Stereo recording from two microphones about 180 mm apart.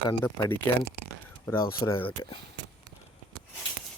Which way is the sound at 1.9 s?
10° left (ahead or behind).